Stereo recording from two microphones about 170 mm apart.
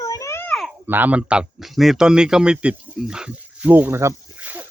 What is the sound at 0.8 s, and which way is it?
A man's voice, 10° right (ahead or behind).